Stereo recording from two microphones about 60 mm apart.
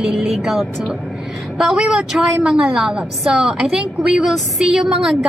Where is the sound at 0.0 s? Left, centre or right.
Centre.